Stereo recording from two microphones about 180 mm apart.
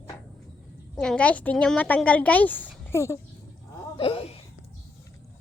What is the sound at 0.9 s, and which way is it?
A woman's voice, 5° left (ahead or behind).